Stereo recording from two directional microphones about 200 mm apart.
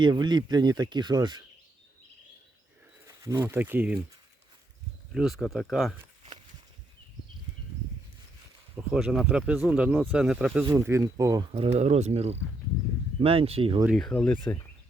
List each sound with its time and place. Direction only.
0.0 s speech: 20° right (ahead or behind)
3.1 s speech: 15° right (ahead or behind)
5.1 s speech: centre (ahead or behind)
8.7 s speech: 5° right (ahead or behind); by 13.8 s 25° right (ahead or behind)
13.8 s speech: centre (ahead or behind)